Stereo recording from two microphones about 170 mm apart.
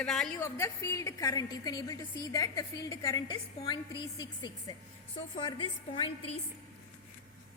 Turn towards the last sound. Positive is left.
turn(degrees=30)  # may be behind; listen again after turning